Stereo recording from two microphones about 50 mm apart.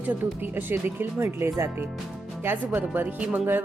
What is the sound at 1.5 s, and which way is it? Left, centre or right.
Speech, right.